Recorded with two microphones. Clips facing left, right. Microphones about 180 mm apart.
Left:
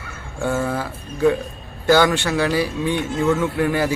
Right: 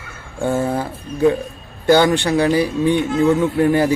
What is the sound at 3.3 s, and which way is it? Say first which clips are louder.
Speech: right 5 dB; 35° right (ahead or behind).